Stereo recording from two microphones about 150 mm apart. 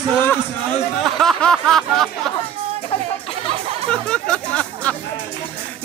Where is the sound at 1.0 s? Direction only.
Centre (ahead or behind).